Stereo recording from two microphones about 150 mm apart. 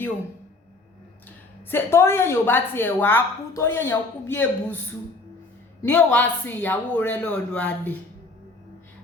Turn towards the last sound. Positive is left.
turn(degrees=10)  # may be behind; listen again after turning